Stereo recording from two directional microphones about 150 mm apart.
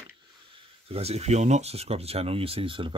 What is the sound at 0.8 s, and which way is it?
Speech, 40° right (ahead or behind).